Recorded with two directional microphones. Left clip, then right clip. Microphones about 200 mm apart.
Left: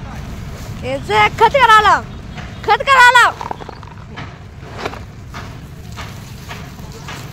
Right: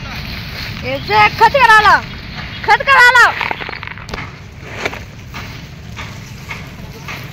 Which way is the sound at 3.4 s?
10° right (ahead or behind).